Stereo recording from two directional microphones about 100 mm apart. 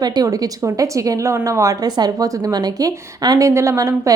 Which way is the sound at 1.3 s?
30° right (ahead or behind).